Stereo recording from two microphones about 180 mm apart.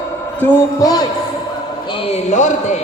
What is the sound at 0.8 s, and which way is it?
Speech, 20° left (ahead or behind).